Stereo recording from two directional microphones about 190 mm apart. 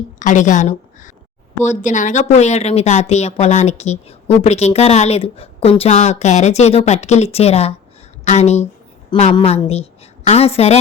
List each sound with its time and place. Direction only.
0.2 s a woman's voice: 40° left (ahead or behind)